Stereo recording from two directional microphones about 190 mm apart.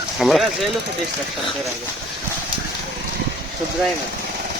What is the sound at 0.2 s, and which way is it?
Speech, centre (ahead or behind).